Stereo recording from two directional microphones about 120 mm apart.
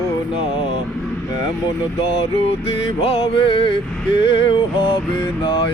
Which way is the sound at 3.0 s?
55° left (ahead or behind).